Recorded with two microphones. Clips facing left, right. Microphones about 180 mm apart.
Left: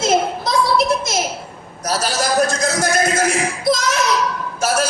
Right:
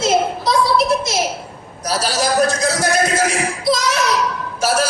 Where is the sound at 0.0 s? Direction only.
45° left (ahead or behind).